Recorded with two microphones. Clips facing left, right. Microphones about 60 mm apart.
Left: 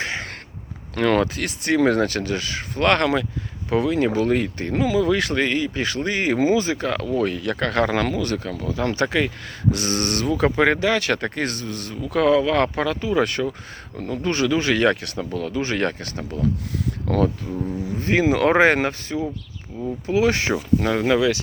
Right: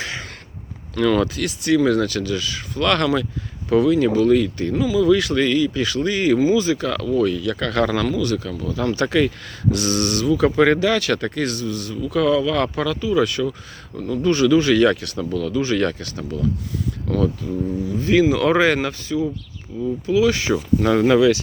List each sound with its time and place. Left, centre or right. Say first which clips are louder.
0.0 s a sound: left 2 dB; left
0.9 s speech: right 1 dB; left
2.9 s speech: right 2 dB; left
10.5 s speech: right 2 dB; left
17.4 s speech: right 3 dB; left
18.1 s speech: right 2 dB; left
19.7 s speech: right 4 dB; left
20.1 s speech: right 2 dB; left
20.8 s speech: right 6 dB; centre